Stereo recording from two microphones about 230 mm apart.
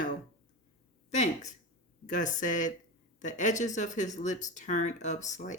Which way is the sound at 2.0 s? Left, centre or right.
Left.